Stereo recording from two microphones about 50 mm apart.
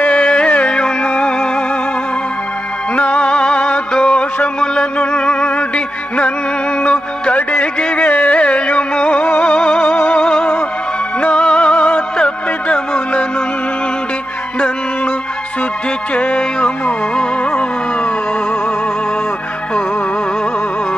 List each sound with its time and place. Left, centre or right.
0.1 s music: left
3.0 s music: left
6.8 s carnatic music: left
8.1 s carnatic music: left
8.4 s carnatic music: left
9.4 s music: left
16.2 s music: left